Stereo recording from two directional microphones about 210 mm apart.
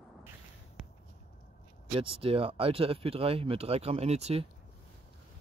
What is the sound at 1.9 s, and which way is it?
Speech, 25° right (ahead or behind).